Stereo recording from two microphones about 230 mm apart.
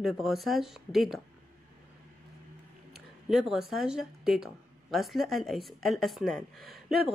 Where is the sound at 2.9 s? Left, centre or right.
Centre.